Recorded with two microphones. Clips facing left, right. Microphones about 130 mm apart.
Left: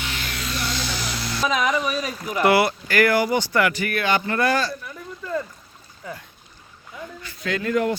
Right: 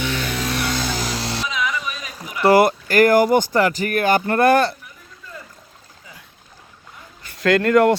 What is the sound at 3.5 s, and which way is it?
Speech, 35° right (ahead or behind).